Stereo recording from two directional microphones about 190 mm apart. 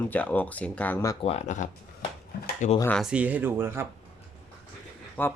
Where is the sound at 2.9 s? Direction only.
5° right (ahead or behind).